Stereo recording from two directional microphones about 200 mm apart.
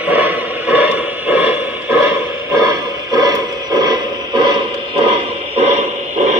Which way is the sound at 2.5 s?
20° right (ahead or behind).